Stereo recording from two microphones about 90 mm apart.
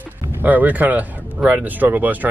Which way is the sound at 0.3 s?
20° right (ahead or behind).